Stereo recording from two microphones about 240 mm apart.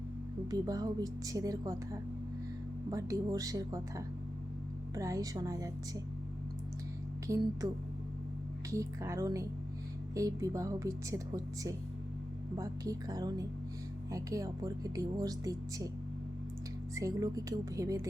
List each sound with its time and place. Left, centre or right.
0.5 s speech: centre
7.6 s speech: centre
16.9 s speech: centre